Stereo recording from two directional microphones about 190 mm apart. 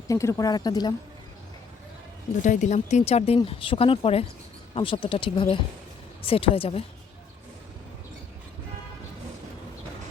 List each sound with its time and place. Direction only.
0.1 s speech: 15° left (ahead or behind)
2.4 s speech: 40° left (ahead or behind)